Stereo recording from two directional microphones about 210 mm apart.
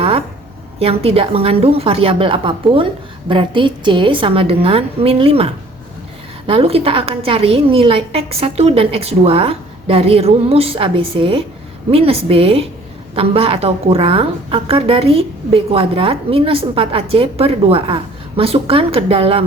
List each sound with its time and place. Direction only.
0.8 s a woman's voice: 30° right (ahead or behind)
6.5 s a woman's voice: 25° right (ahead or behind)